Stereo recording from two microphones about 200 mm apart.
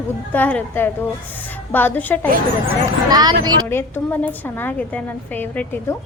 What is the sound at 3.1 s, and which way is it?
Speech, 20° right (ahead or behind).